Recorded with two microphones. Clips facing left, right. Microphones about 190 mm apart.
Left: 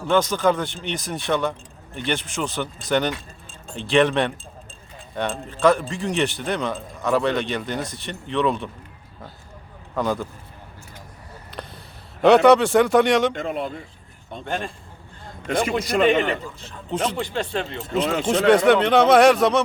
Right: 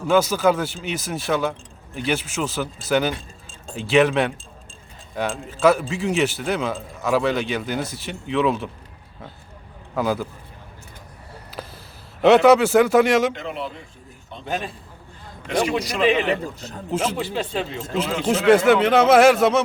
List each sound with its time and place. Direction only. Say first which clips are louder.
0.1 s speech: right 1 dB; 5° right (ahead or behind)
9.9 s speech: right 1 dB; 5° right (ahead or behind)
11.6 s a sound: right 1 dB; 5° right (ahead or behind)
12.2 s speech: even; centre (ahead or behind)
13.3 s speech: left 3 dB; 50° left (ahead or behind)
14.4 s speech: right 1 dB; 5° right (ahead or behind)
16.0 s speech: right 2 dB; 5° right (ahead or behind)
16.6 s speech: right 5 dB; 40° right (ahead or behind)
16.9 s speech: right 1 dB; 5° right (ahead or behind)